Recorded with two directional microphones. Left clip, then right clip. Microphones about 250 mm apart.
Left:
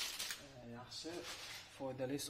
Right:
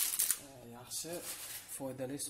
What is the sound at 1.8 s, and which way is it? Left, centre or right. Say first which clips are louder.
Speech: right 2 dB; right.